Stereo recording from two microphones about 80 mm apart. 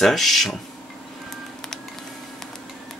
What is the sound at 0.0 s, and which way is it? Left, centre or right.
Speech, centre.